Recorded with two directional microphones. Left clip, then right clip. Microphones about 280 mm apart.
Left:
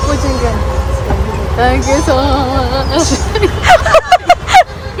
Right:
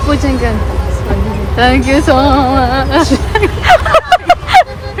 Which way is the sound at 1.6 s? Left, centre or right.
Right.